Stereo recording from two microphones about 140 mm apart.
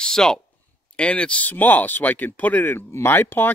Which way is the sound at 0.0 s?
5° left (ahead or behind).